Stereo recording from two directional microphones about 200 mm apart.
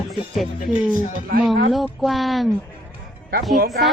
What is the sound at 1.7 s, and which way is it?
Speech, centre (ahead or behind).